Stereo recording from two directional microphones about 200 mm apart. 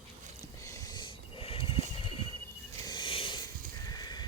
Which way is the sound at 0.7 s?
15° left (ahead or behind).